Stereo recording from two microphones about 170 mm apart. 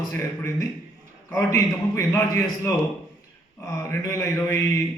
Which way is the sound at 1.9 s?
15° left (ahead or behind).